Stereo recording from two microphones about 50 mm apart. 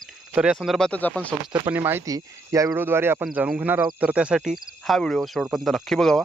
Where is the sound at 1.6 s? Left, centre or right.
Right.